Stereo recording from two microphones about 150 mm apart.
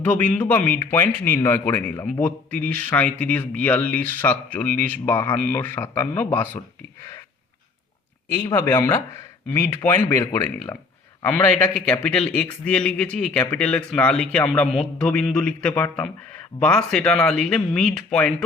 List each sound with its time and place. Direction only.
0.0 s a man's voice: 10° left (ahead or behind)
8.5 s a man's voice: 15° left (ahead or behind)